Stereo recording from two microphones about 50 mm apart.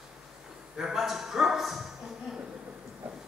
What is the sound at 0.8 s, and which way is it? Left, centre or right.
Speech, centre.